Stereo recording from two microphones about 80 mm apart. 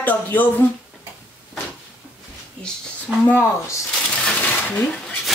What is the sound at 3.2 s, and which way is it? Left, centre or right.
Speech, left.